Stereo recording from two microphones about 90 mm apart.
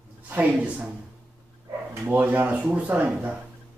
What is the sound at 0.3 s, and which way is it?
Speech, 15° right (ahead or behind).